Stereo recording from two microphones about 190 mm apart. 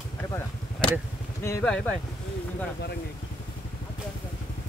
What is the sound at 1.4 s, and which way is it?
Speech, 15° left (ahead or behind).